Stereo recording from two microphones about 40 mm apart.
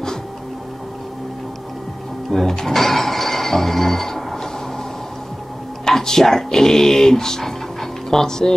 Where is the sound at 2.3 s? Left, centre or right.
Centre.